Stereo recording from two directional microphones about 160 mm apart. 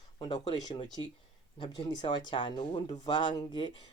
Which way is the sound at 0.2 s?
25° left (ahead or behind).